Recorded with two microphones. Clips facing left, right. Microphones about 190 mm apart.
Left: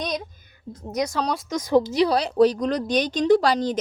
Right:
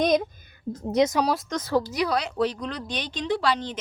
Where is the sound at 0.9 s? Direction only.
20° right (ahead or behind).